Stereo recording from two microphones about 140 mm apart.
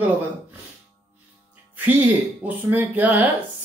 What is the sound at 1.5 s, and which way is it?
Speech, 10° right (ahead or behind).